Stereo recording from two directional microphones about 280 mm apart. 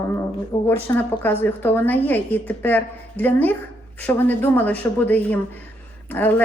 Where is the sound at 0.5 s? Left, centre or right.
Centre.